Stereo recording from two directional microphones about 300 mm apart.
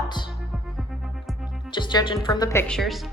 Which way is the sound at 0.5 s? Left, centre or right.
Centre.